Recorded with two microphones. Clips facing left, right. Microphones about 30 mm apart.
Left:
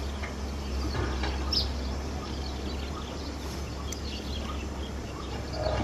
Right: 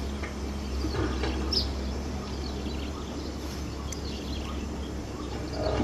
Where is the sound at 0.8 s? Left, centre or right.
Centre.